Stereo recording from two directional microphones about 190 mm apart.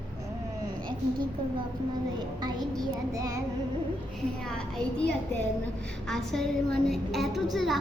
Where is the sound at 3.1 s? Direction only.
20° right (ahead or behind).